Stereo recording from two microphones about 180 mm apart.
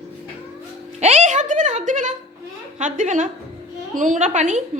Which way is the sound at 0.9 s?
40° right (ahead or behind).